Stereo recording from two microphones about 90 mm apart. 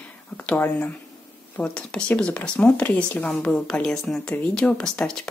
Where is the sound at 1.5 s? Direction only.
15° left (ahead or behind).